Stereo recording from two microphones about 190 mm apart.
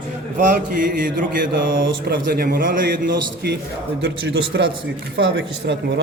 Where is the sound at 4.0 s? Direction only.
65° right (ahead or behind).